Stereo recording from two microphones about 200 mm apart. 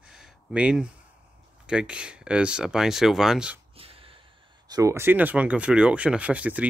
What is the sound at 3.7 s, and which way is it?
Gasp, 30° right (ahead or behind).